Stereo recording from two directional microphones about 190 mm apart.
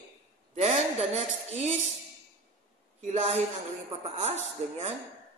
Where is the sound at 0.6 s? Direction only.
35° right (ahead or behind).